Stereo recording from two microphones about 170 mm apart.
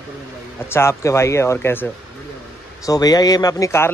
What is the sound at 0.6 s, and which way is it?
A man's voice, 15° left (ahead or behind).